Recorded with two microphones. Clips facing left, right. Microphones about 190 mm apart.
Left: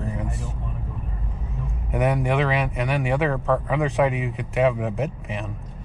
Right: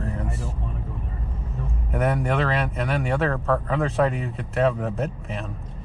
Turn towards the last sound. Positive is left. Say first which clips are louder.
# left 1 dB
turn(degrees=0)  # may be behind; listen again after turning